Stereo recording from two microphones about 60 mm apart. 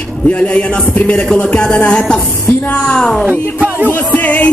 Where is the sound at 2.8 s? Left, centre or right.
Centre.